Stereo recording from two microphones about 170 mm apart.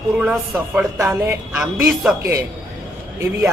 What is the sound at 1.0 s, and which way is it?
Speech, 15° right (ahead or behind).